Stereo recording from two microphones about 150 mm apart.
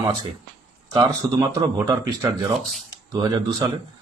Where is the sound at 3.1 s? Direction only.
30° right (ahead or behind).